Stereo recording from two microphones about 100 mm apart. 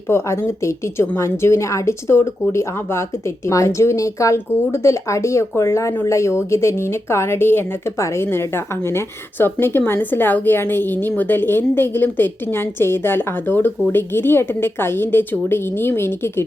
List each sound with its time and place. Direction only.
0.1 s a woman's voice: 25° left (ahead or behind)